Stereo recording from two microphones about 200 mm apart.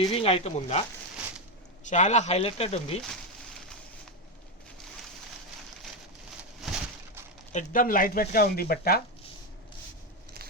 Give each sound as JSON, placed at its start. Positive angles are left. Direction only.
{"t": 0.0, "sound": "speech", "side_deg": 30}
{"t": 1.9, "sound": "speech", "side_deg": 35}
{"t": 7.5, "sound": "speech", "side_deg": 45}